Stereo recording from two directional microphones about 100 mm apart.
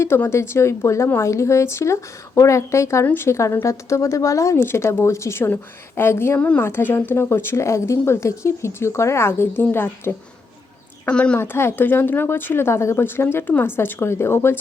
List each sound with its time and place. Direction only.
0.0 s speech: 25° left (ahead or behind)
11.1 s a woman's voice: 10° left (ahead or behind)
11.3 s speech: 25° left (ahead or behind)